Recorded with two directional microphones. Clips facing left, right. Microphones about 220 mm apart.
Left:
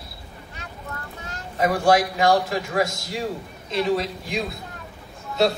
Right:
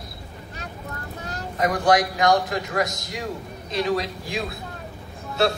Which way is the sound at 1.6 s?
30° left (ahead or behind).